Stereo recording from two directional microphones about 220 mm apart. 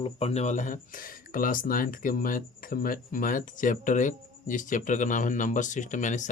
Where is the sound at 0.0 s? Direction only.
25° left (ahead or behind).